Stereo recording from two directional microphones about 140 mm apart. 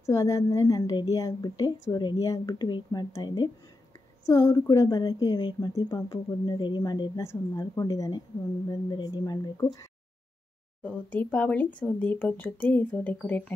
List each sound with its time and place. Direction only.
0.0 s a woman's voice: 20° left (ahead or behind)
10.8 s speech: 10° left (ahead or behind)